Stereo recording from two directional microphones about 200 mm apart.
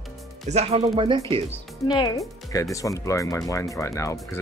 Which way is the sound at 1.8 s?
20° left (ahead or behind).